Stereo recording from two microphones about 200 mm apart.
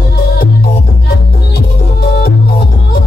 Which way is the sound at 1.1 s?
55° left (ahead or behind).